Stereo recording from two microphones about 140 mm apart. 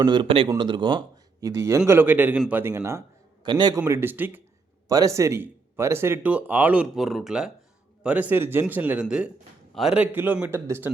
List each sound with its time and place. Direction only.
0.0 s a man's voice: 35° right (ahead or behind); by 3.0 s 20° right (ahead or behind)
3.4 s a man's voice: 35° right (ahead or behind)
3.8 s speech: 15° right (ahead or behind)
4.9 s speech: 25° right (ahead or behind)